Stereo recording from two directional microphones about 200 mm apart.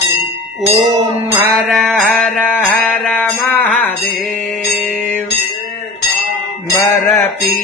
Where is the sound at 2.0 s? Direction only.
5° left (ahead or behind).